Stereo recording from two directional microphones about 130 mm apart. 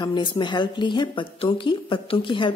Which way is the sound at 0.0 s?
35° left (ahead or behind).